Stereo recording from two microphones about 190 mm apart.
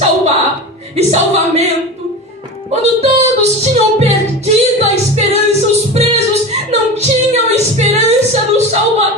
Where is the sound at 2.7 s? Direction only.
35° right (ahead or behind).